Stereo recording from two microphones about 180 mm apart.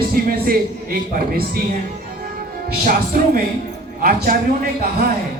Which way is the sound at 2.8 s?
55° right (ahead or behind).